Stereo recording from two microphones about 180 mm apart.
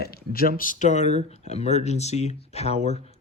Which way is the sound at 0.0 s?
55° left (ahead or behind).